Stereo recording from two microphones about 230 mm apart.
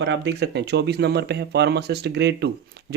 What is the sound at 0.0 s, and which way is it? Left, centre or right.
Speech, right.